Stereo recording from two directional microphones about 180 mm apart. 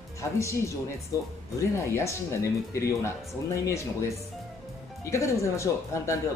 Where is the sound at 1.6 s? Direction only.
15° left (ahead or behind).